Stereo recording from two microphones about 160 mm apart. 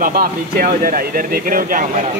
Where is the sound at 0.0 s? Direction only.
65° right (ahead or behind).